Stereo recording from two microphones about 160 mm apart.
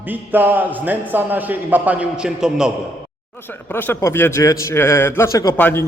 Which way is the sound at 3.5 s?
10° left (ahead or behind).